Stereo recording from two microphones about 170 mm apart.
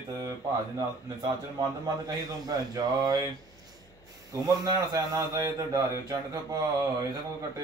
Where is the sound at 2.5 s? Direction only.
25° right (ahead or behind).